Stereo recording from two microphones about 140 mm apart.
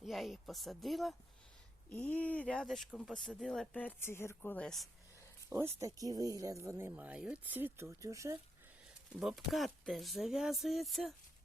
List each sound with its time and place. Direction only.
0.0 s speech: centre (ahead or behind)
1.9 s speech: 10° left (ahead or behind)
5.5 s speech: 20° right (ahead or behind)
9.2 s speech: centre (ahead or behind)